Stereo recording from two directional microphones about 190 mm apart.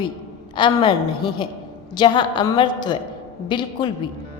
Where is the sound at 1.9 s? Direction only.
25° left (ahead or behind).